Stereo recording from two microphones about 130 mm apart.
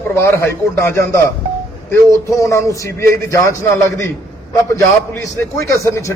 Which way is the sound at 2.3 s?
25° left (ahead or behind).